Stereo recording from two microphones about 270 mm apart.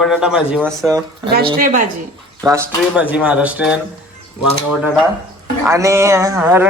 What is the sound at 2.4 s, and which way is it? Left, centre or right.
Speech, centre.